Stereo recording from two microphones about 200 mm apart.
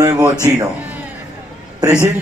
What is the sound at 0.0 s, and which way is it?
Music, 15° right (ahead or behind).